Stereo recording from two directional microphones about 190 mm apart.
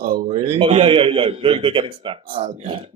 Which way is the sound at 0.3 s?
30° right (ahead or behind).